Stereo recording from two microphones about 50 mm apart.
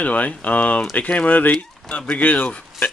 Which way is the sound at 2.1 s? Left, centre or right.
Left.